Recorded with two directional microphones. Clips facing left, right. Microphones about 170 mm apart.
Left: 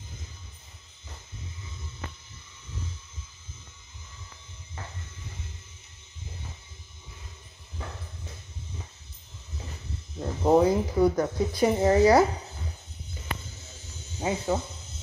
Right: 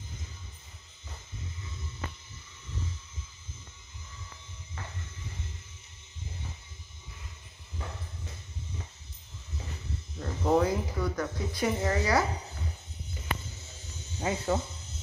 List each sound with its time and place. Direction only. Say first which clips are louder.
10.1 s speech: left 5 dB; 25° left (ahead or behind)
14.2 s speech: left 2 dB; 15° left (ahead or behind)